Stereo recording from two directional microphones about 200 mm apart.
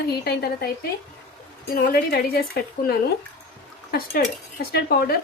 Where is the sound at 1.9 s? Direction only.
50° left (ahead or behind).